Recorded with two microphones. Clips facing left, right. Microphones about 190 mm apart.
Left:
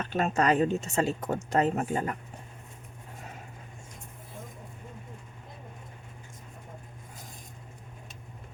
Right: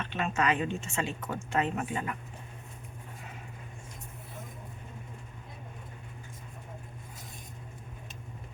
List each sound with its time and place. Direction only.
0.0 s speech: 40° left (ahead or behind)